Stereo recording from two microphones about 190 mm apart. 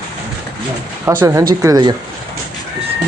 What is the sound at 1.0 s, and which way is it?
Speech, 10° right (ahead or behind).